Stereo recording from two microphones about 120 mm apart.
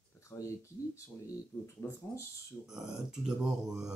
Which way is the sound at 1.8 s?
20° left (ahead or behind).